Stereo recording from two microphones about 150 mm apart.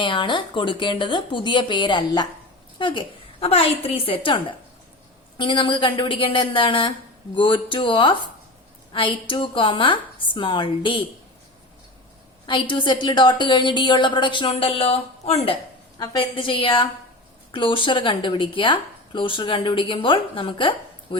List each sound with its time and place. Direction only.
0.0 s a woman's voice: 35° left (ahead or behind)
12.5 s a woman's voice: 30° left (ahead or behind)
14.5 s a woman's voice: 45° left (ahead or behind)